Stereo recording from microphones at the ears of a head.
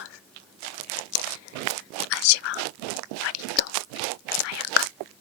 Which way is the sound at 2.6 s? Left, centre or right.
Right.